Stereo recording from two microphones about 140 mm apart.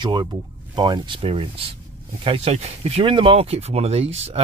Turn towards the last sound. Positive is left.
turn(degrees=-45)  # may be behind; listen again after turning